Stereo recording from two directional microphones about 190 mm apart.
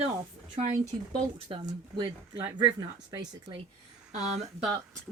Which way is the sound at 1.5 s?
30° right (ahead or behind).